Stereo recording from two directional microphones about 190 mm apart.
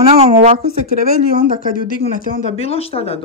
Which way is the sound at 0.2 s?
35° right (ahead or behind).